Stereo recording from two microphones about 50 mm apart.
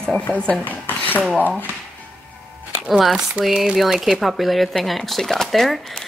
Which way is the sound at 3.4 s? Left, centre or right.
Right.